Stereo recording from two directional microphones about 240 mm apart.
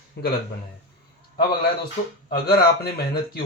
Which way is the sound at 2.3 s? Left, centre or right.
Left.